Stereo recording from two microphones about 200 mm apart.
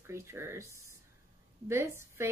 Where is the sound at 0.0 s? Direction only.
15° right (ahead or behind).